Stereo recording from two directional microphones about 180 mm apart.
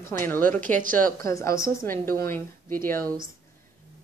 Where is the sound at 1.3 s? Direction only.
15° left (ahead or behind).